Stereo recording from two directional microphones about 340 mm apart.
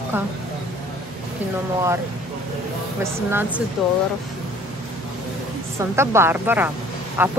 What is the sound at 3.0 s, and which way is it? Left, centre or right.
Speech, centre.